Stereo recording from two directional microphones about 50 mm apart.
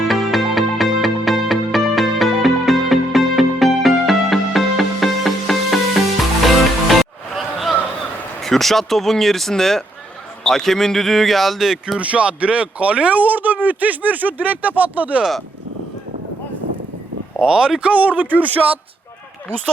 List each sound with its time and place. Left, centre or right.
0.1 s music: centre
8.4 s speech: centre
11.9 s speech: right
17.4 s speech: centre
17.9 s speech: right